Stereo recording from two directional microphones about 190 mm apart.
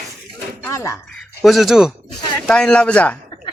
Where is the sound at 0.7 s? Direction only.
15° left (ahead or behind).